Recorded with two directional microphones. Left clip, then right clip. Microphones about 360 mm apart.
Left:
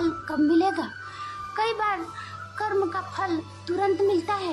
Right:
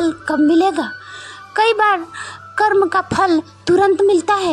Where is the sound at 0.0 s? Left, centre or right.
Centre.